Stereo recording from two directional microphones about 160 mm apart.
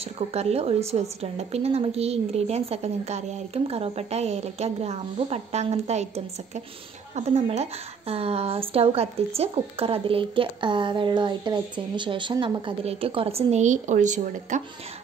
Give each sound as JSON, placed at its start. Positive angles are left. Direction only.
{"t": 0.3, "sound": "a woman's voice", "side_deg": -40}